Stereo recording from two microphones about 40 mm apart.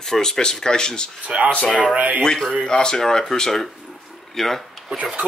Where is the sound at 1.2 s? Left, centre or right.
Right.